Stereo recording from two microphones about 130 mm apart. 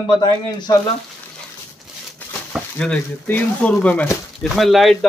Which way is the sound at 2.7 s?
10° left (ahead or behind).